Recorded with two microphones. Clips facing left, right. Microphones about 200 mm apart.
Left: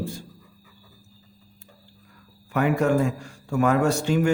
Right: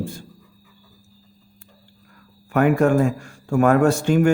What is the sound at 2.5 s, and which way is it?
A man's voice, 50° right (ahead or behind).